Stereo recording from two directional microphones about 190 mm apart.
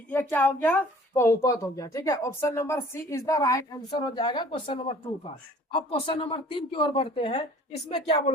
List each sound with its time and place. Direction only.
0.1 s a woman's voice: 10° left (ahead or behind); by 7.4 s 30° left (ahead or behind)